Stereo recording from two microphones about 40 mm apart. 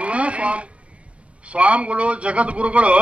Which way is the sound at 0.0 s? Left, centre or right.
Right.